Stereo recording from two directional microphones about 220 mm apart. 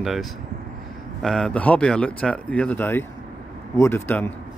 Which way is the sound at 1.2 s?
5° left (ahead or behind).